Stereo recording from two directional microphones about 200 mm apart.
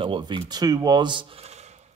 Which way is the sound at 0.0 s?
25° right (ahead or behind).